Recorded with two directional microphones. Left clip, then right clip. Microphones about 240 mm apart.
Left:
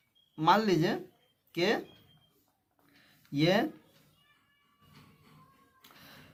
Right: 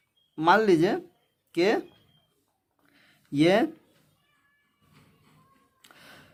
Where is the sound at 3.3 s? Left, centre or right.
Right.